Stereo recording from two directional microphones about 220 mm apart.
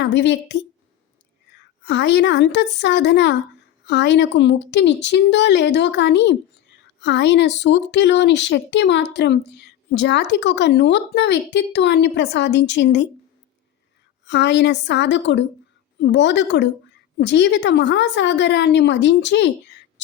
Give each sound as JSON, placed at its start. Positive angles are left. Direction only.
{"t": 0.0, "sound": "a woman's voice", "side_deg": 55}
{"t": 1.8, "sound": "a woman's voice", "side_deg": 50}
{"t": 14.3, "sound": "a woman's voice", "side_deg": 50}